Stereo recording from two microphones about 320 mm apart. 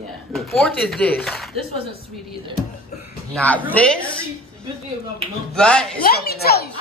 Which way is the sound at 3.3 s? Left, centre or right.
Centre.